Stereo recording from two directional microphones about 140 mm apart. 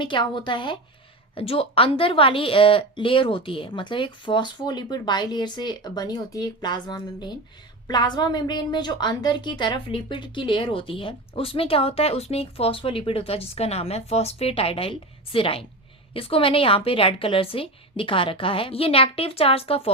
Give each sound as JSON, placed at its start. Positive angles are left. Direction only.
{"t": 0.0, "sound": "a woman's voice", "side_deg": 35}